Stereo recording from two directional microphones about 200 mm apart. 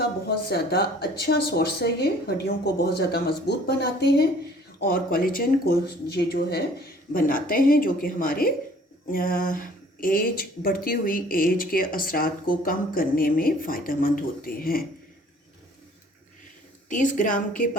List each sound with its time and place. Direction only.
0.3 s speech: 55° left (ahead or behind)
16.9 s a woman's voice: 40° left (ahead or behind)